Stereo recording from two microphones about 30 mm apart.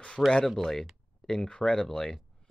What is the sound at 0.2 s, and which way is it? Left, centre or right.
Speech, centre.